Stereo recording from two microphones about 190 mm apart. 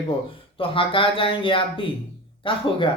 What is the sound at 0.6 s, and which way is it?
Speech, 30° left (ahead or behind).